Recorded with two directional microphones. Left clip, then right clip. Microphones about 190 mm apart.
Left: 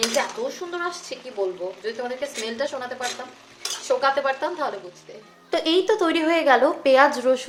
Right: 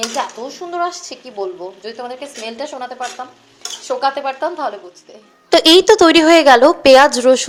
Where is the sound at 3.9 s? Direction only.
15° right (ahead or behind).